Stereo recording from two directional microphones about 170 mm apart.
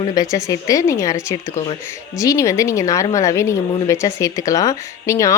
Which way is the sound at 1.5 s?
30° left (ahead or behind).